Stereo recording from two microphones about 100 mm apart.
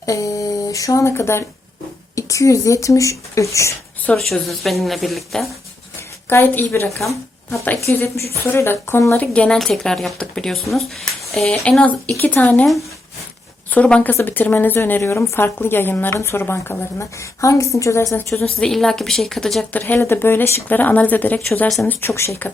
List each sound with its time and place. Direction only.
0.0 s a sound: 35° left (ahead or behind)
2.1 s speech: 30° left (ahead or behind)
4.3 s speech: centre (ahead or behind)
6.2 s a woman's voice: 20° left (ahead or behind)
7.8 s a woman's voice: 25° left (ahead or behind)
9.1 s speech: 10° left (ahead or behind)
12.1 s speech: 20° left (ahead or behind)
13.7 s a woman's voice: 15° left (ahead or behind)
18.4 s speech: 5° left (ahead or behind)
19.7 s a woman's voice: 20° left (ahead or behind)